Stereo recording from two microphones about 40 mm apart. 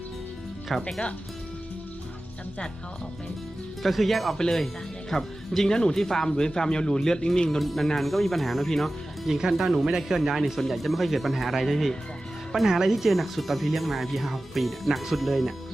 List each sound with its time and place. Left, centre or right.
0.7 s speech: centre
3.8 s speech: centre
7.6 s speech: centre
9.4 s speech: centre
12.6 s speech: centre